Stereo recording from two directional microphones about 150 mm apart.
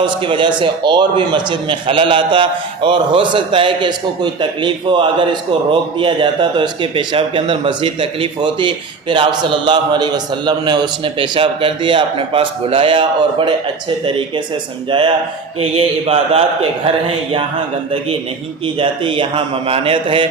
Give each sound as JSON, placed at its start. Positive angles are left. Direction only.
{"t": 0.0, "sound": "a man's voice", "side_deg": -30}
{"t": 18.8, "sound": "a man's voice", "side_deg": -35}